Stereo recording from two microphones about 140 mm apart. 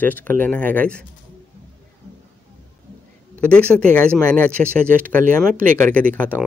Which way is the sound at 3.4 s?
10° left (ahead or behind).